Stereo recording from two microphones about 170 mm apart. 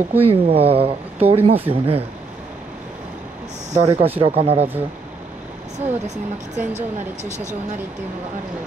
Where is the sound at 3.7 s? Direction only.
35° right (ahead or behind).